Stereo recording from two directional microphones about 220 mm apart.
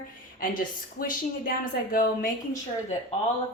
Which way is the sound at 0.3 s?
40° left (ahead or behind).